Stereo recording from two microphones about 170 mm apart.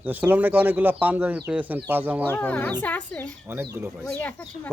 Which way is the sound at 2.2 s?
10° left (ahead or behind).